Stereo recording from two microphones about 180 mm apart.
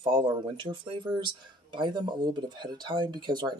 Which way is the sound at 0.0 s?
25° right (ahead or behind).